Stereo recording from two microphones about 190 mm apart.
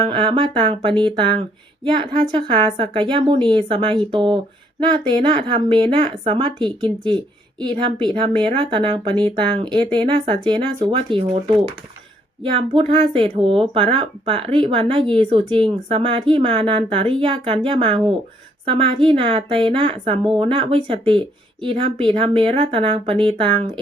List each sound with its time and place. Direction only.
0.0 s a woman's voice: 25° right (ahead or behind)